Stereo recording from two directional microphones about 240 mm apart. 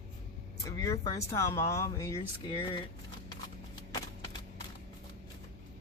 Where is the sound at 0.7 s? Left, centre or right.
Centre.